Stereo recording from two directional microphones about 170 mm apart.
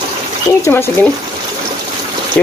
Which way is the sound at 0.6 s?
15° left (ahead or behind).